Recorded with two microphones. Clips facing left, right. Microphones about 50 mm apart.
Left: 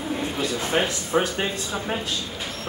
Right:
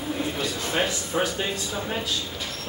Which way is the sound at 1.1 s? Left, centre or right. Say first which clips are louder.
Left 4 dB; left.